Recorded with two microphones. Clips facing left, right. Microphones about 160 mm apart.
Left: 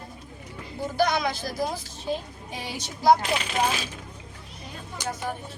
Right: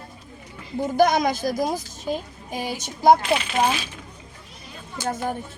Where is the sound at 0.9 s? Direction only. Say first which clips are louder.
Right 5 dB; 45° right (ahead or behind).